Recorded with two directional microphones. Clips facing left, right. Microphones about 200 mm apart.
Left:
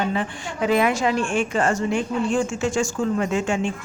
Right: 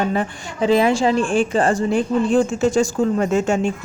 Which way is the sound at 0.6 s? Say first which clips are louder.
Right 4 dB; 30° right (ahead or behind).